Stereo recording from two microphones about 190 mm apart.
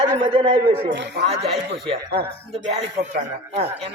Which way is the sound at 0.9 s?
70° right (ahead or behind).